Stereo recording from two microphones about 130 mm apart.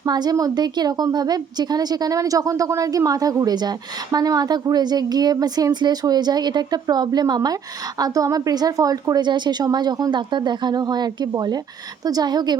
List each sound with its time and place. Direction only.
0.0 s a woman's voice: 30° right (ahead or behind)